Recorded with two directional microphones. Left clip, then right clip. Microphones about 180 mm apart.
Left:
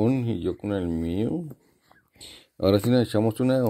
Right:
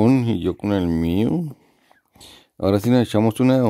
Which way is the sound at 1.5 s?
25° right (ahead or behind).